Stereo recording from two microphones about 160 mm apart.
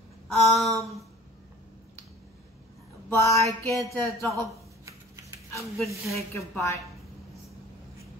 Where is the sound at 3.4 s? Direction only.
20° left (ahead or behind).